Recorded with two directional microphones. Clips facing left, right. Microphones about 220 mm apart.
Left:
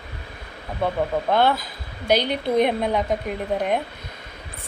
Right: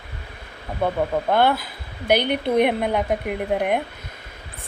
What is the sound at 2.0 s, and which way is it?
Speech, 55° right (ahead or behind).